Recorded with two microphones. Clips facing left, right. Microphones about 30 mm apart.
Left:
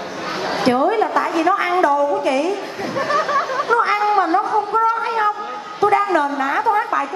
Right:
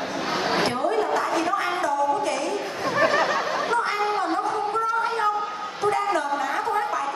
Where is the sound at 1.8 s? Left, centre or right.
Left.